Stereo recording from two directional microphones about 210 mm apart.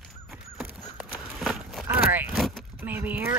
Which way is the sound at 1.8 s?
10° right (ahead or behind).